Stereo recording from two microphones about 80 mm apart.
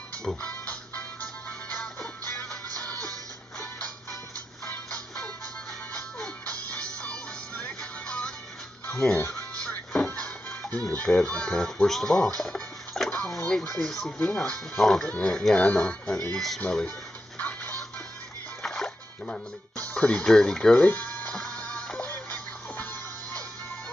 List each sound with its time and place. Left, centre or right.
0.4 s music: centre
4.6 s music: centre
8.9 s speech: centre
9.2 s music: centre
13.3 s speech: centre
17.4 s music: centre